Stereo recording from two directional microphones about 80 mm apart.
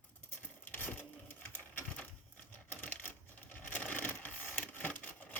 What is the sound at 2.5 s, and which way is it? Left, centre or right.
Coin, left.